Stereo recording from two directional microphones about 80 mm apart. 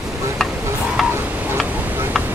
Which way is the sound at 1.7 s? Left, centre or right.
Right.